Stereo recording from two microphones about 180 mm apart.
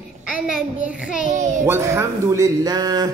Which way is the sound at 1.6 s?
15° right (ahead or behind).